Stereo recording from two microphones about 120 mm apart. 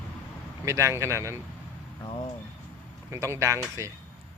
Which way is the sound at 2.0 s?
40° left (ahead or behind).